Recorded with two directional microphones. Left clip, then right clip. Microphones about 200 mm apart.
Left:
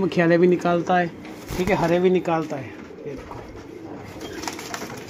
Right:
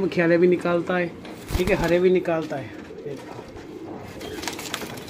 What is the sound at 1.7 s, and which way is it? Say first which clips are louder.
Speech: even; 35° left (ahead or behind).